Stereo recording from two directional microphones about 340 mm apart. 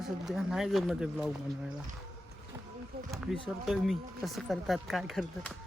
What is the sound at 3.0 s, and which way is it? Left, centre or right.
Speech, centre.